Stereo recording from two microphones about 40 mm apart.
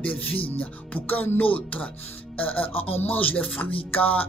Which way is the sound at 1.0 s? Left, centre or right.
Left.